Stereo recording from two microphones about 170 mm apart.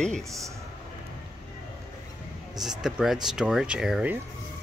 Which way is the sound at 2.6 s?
5° right (ahead or behind).